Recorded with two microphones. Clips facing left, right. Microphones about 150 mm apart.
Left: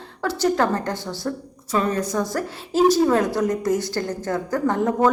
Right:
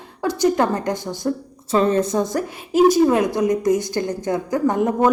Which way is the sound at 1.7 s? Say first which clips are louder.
Right 5 dB; 25° right (ahead or behind).